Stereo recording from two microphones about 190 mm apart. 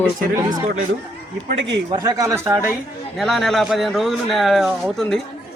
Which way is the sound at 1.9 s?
20° right (ahead or behind).